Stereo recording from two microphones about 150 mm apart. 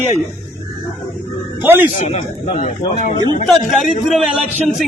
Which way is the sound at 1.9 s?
45° left (ahead or behind).